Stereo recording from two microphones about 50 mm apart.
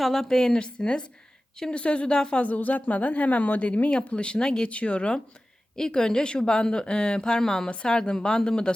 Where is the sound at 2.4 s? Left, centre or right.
Left.